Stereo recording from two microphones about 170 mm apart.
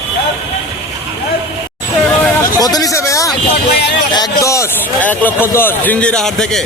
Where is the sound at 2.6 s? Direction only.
20° left (ahead or behind); by 6.6 s 5° left (ahead or behind).